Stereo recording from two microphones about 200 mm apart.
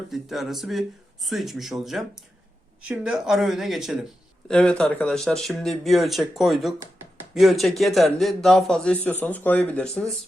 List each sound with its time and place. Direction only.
0.1 s a man's voice: centre (ahead or behind)